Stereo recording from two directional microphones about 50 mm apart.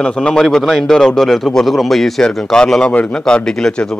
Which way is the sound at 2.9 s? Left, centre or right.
Left.